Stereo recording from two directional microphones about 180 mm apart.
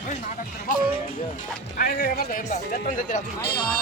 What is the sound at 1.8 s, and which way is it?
Speech, 55° left (ahead or behind).